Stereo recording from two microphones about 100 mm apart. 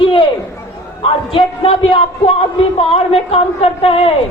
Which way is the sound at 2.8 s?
75° left (ahead or behind).